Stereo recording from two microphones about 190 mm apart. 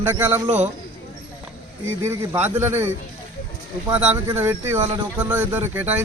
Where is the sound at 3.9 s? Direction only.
10° right (ahead or behind).